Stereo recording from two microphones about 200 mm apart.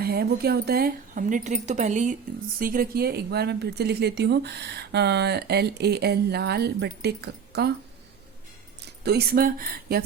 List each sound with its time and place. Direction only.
0.0 s speech: 50° right (ahead or behind)
9.0 s speech: 50° right (ahead or behind)